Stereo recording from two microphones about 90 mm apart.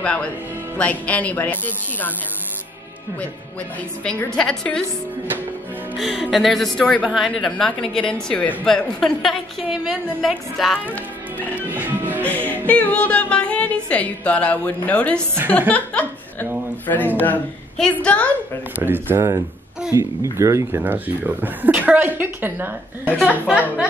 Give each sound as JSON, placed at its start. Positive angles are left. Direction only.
{"t": 0.0, "sound": "speech", "side_deg": 15}
{"t": 4.4, "sound": "speech", "side_deg": 10}
{"t": 5.9, "sound": "a woman's voice", "side_deg": 0}
{"t": 11.7, "sound": "music", "side_deg": -20}
{"t": 12.3, "sound": "speech", "side_deg": 15}
{"t": 15.1, "sound": "speech", "side_deg": -25}
{"t": 15.7, "sound": "laughter", "side_deg": 15}
{"t": 16.8, "sound": "speech", "side_deg": 20}
{"t": 18.8, "sound": "speech", "side_deg": -25}
{"t": 20.8, "sound": "speech", "side_deg": -20}